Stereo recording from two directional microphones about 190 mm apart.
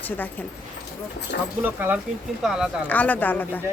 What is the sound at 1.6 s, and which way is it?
Speech, 10° right (ahead or behind).